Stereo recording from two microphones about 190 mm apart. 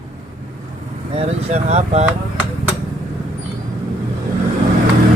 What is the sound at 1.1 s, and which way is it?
Vehicle, 35° right (ahead or behind).